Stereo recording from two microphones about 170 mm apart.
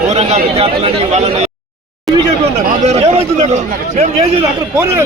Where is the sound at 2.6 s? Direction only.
40° right (ahead or behind).